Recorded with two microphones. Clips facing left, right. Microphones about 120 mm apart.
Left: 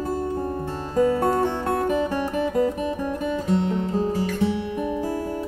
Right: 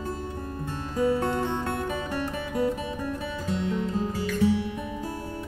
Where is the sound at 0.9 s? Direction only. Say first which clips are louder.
Left 5 dB; 40° left (ahead or behind).